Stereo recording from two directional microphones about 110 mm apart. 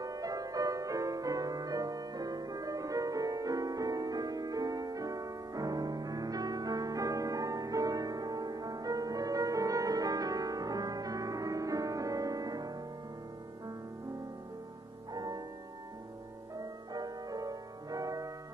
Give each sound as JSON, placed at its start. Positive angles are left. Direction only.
{"t": 0.0, "sound": "music", "side_deg": -35}
{"t": 15.1, "sound": "music", "side_deg": -35}
{"t": 16.5, "sound": "music", "side_deg": -35}